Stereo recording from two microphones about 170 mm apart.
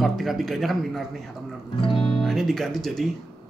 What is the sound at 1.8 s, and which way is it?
Music, 30° left (ahead or behind).